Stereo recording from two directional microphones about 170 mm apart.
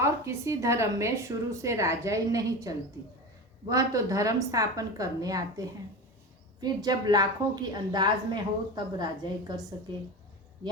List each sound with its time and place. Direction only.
0.0 s a woman's voice: 15° right (ahead or behind)